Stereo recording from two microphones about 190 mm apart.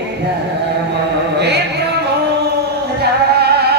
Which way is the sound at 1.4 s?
60° right (ahead or behind).